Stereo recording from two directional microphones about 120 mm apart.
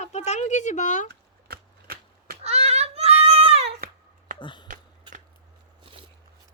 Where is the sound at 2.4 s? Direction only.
60° right (ahead or behind).